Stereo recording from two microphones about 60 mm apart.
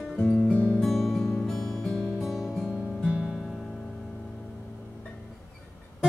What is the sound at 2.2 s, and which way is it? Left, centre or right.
Music, centre.